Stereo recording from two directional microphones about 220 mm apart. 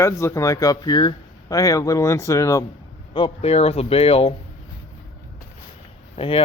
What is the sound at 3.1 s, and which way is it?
Speech, 25° left (ahead or behind).